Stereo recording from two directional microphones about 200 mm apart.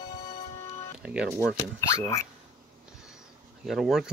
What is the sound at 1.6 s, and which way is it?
Speech, 15° left (ahead or behind).